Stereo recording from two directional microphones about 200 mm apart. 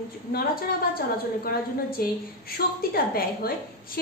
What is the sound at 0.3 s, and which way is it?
A woman's voice, 45° left (ahead or behind).